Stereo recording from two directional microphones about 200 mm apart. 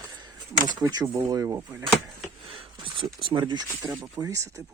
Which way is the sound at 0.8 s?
20° right (ahead or behind).